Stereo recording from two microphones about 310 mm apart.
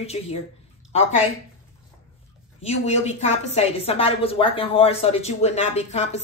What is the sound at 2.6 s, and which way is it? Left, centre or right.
A woman's voice, left.